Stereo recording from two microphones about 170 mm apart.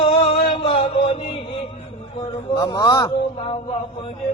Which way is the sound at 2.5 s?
20° left (ahead or behind).